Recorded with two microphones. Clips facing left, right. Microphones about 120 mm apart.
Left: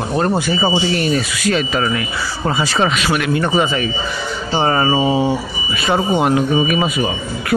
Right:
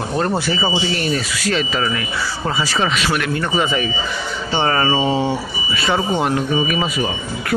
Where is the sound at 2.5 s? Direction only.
20° left (ahead or behind).